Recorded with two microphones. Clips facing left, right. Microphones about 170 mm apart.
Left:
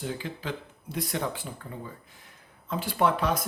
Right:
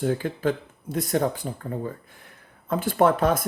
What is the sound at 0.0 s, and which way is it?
Speech, 50° right (ahead or behind).